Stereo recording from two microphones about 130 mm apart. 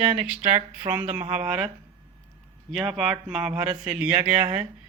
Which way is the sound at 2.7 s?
Centre (ahead or behind).